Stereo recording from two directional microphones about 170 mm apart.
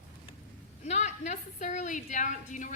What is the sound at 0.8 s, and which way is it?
A woman's voice, 40° left (ahead or behind).